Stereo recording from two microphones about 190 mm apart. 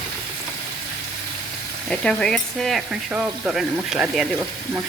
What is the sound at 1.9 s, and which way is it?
Frying, 5° left (ahead or behind).